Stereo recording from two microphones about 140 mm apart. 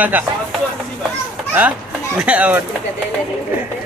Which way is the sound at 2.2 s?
10° right (ahead or behind).